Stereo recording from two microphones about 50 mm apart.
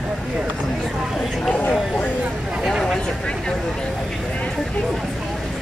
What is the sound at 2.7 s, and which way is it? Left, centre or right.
Speech, centre.